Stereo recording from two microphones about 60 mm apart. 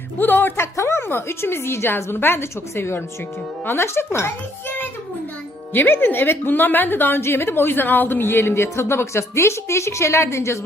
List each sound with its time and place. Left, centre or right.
0.2 s a woman's voice: left
5.7 s a woman's voice: left